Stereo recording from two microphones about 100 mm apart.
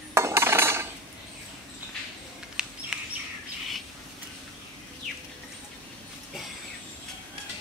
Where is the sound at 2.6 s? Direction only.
5° right (ahead or behind).